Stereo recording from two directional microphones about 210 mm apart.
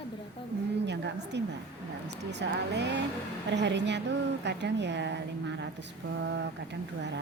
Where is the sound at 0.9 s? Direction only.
55° right (ahead or behind).